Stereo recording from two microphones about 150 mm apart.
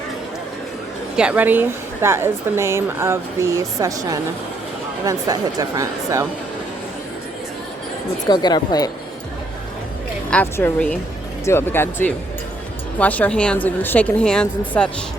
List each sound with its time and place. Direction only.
1.1 s a woman's voice: 5° right (ahead or behind)
8.3 s speech: 30° left (ahead or behind)
10.2 s a woman's voice: 10° left (ahead or behind)